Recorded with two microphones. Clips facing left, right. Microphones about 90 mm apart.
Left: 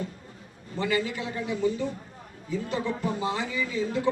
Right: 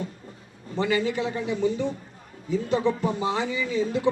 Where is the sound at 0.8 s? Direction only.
20° right (ahead or behind).